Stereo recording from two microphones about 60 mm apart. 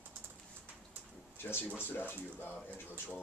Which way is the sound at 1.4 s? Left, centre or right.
Left.